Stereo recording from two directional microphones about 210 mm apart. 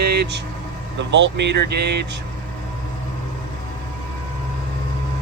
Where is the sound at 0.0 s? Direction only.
50° right (ahead or behind).